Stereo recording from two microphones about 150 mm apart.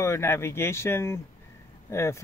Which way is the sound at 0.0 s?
15° left (ahead or behind).